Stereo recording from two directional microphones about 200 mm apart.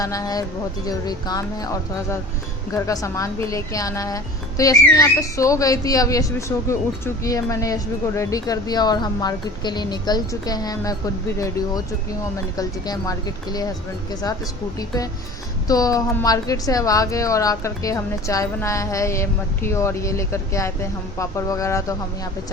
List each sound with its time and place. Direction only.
0.0 s a woman's voice: 15° left (ahead or behind)